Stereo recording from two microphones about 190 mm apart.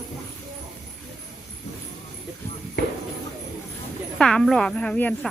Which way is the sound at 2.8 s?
60° left (ahead or behind).